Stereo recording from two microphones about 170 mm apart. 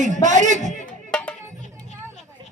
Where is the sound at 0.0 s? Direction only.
45° right (ahead or behind).